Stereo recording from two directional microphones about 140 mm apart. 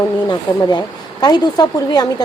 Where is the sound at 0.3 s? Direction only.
30° left (ahead or behind).